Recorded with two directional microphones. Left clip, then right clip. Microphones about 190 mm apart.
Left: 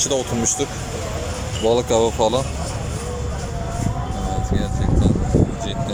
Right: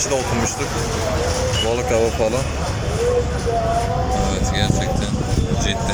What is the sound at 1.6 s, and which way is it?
Speech, 25° left (ahead or behind).